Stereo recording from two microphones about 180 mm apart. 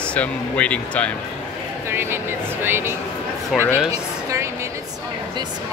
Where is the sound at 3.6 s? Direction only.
10° left (ahead or behind).